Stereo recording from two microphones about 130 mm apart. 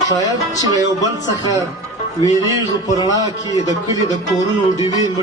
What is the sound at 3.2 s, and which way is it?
A man's voice, 25° right (ahead or behind).